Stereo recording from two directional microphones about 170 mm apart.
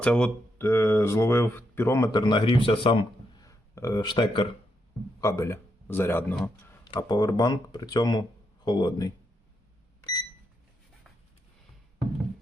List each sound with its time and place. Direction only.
0.0 s speech: 5° left (ahead or behind); by 3.1 s 35° left (ahead or behind)
3.4 s speech: 20° left (ahead or behind)
5.2 s a man's voice: 15° left (ahead or behind)
6.8 s speech: 25° left (ahead or behind)